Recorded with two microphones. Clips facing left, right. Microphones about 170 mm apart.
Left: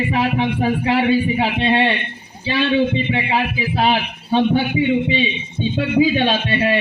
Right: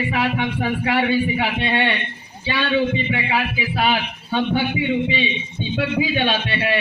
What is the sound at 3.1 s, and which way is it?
A man's voice, 30° left (ahead or behind).